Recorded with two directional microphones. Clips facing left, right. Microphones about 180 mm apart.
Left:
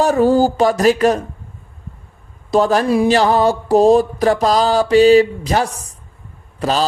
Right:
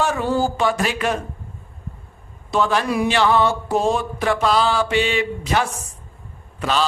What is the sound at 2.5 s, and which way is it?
Mantra, 40° left (ahead or behind).